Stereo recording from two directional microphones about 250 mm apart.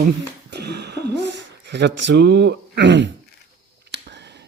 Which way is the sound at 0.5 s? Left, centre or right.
Right.